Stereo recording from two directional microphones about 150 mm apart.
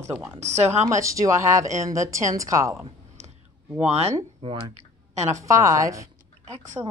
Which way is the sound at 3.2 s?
50° right (ahead or behind).